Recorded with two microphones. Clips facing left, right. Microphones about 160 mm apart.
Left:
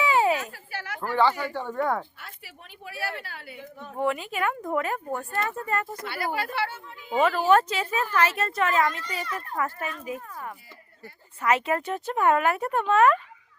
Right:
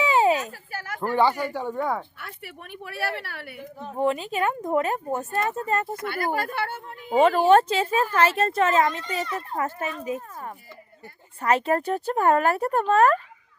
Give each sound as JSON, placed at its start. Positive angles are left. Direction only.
{"t": 0.0, "sound": "a sound", "side_deg": -20}
{"t": 0.7, "sound": "a sound", "side_deg": -45}
{"t": 1.1, "sound": "speech", "side_deg": -15}
{"t": 2.1, "sound": "speech", "side_deg": -60}
{"t": 3.9, "sound": "a child's voice", "side_deg": -25}
{"t": 6.0, "sound": "speech", "side_deg": -50}
{"t": 7.4, "sound": "a child's voice", "side_deg": -30}